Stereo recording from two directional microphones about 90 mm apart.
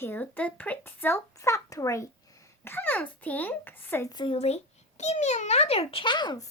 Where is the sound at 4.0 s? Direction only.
45° left (ahead or behind).